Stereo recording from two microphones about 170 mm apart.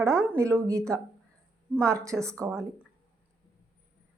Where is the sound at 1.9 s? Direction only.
20° right (ahead or behind).